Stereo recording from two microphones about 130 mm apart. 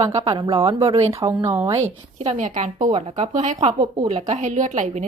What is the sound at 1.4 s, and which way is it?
Speech, 20° right (ahead or behind).